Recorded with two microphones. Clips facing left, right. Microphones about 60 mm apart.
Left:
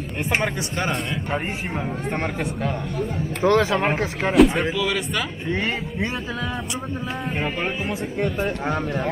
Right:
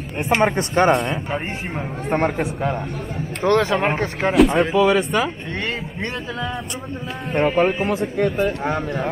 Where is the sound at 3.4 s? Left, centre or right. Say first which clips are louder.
Right 1 dB; centre.